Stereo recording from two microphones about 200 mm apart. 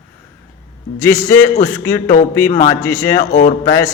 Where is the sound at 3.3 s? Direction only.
45° left (ahead or behind).